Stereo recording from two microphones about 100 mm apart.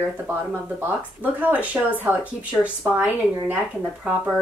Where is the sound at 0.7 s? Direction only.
15° right (ahead or behind).